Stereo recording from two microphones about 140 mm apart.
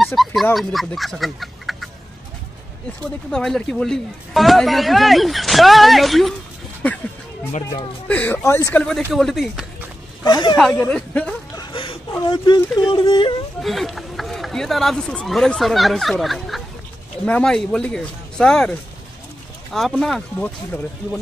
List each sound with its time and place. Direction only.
0.0 s speech: centre (ahead or behind)
3.3 s a man's voice: 5° left (ahead or behind)
8.1 s speech: 15° left (ahead or behind)
9.1 s a man's voice: centre (ahead or behind)
10.2 s speech: 30° left (ahead or behind)
10.9 s a man's voice: 5° left (ahead or behind)
11.5 s whimper: 35° left (ahead or behind)
12.3 s speech: 30° left (ahead or behind)
13.6 s a man's voice: centre (ahead or behind)
20.3 s speech: 10° left (ahead or behind)